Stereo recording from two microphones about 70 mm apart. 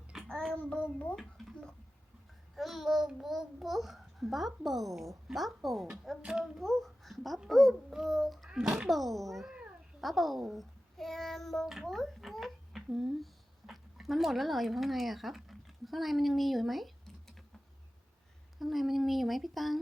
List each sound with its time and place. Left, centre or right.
0.3 s child singing: centre
0.5 s a child's voice: centre
1.1 s a child's voice: centre
18.6 s a child's voice: centre